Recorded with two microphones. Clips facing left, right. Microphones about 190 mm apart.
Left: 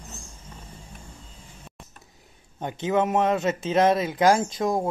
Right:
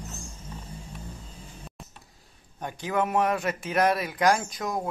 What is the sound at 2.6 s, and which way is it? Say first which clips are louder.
Speech: left 4 dB; 25° left (ahead or behind).